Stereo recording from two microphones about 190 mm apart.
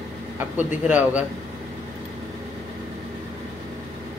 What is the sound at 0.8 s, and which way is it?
Speech, 10° right (ahead or behind).